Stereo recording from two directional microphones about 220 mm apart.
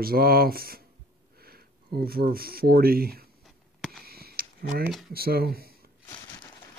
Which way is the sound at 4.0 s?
45° right (ahead or behind).